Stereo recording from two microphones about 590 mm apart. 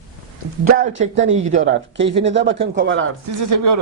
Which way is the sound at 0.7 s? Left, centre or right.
Centre.